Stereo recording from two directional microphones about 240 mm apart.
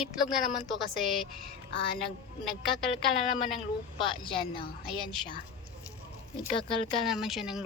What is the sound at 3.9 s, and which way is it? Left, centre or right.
Speech, left.